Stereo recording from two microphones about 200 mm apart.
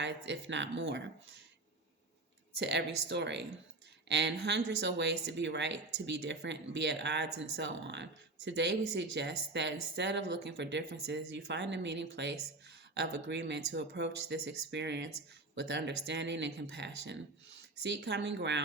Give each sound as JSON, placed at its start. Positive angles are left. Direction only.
{"t": 0.0, "sound": "speech", "side_deg": -65}
{"t": 2.6, "sound": "speech", "side_deg": -60}